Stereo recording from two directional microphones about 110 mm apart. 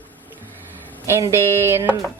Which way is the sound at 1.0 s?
25° right (ahead or behind).